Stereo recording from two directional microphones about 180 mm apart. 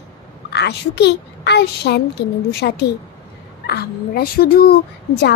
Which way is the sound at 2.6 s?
70° left (ahead or behind).